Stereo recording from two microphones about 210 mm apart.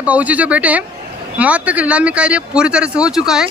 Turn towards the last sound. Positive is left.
turn(degrees=0)  # may be behind; listen again after turning